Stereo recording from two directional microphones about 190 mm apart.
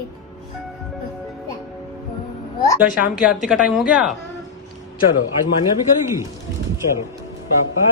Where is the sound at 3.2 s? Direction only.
5° right (ahead or behind).